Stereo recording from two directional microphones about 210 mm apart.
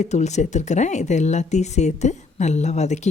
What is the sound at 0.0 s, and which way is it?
Speech, 35° left (ahead or behind).